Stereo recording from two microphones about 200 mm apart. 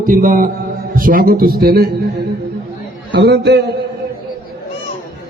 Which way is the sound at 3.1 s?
55° right (ahead or behind).